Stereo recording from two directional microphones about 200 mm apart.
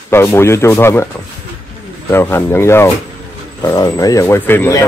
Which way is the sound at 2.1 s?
10° left (ahead or behind).